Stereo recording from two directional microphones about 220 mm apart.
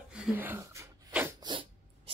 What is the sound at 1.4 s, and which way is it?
Dog, 20° right (ahead or behind).